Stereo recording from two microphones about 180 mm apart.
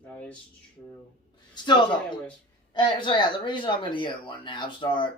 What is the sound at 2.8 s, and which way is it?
Speech, 25° left (ahead or behind).